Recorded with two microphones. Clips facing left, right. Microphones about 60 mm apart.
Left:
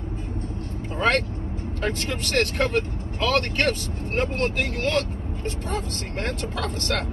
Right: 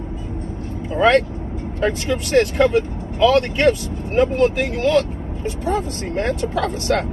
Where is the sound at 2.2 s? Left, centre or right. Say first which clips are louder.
Right 8 dB; left.